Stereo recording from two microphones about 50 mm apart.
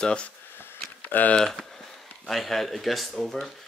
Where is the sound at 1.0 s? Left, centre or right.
Left.